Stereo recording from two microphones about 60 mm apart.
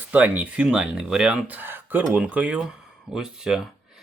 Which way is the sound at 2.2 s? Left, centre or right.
Right.